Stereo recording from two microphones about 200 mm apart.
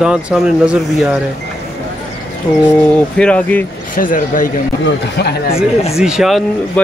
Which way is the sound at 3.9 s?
45° left (ahead or behind).